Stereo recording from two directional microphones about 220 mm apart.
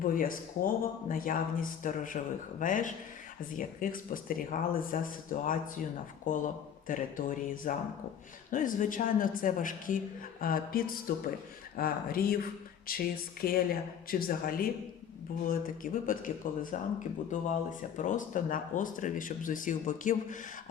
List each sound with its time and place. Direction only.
0.0 s a man's voice: 40° left (ahead or behind)